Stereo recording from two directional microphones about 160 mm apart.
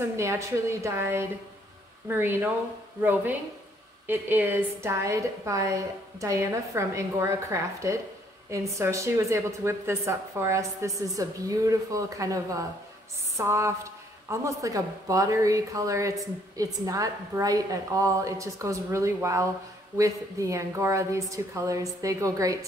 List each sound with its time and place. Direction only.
0.2 s a woman's voice: 15° right (ahead or behind)